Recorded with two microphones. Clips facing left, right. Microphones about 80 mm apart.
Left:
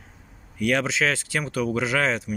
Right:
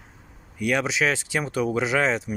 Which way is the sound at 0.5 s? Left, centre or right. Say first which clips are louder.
Left 1 dB; centre.